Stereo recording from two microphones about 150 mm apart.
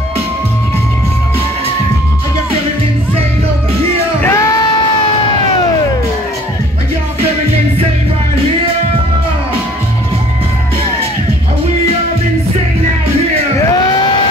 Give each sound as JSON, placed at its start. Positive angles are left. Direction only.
{"t": 4.2, "sound": "music", "side_deg": 20}